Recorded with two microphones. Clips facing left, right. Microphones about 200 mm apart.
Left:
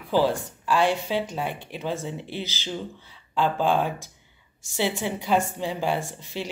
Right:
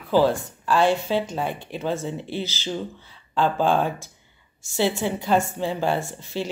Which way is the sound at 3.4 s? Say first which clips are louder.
Right 2 dB; 50° right (ahead or behind).